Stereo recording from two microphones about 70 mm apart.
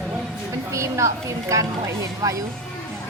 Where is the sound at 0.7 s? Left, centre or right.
Right.